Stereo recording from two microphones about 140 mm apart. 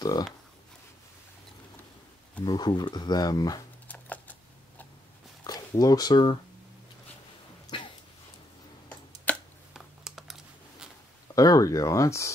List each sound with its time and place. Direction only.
0.0 s speech: 30° left (ahead or behind)
2.4 s speech: 30° left (ahead or behind)
3.8 s typing: 10° left (ahead or behind)
5.4 s speech: 30° left (ahead or behind)
7.6 s a sound: 35° left (ahead or behind)
9.3 s a sound: 10° left (ahead or behind)
9.8 s typing: 5° right (ahead or behind)
11.3 s speech: 25° left (ahead or behind)